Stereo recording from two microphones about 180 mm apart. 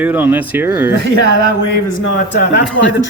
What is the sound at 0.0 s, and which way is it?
Speech, 10° right (ahead or behind).